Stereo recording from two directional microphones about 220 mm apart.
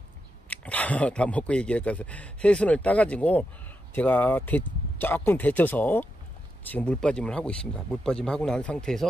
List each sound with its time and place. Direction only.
0.5 s speech: 5° left (ahead or behind)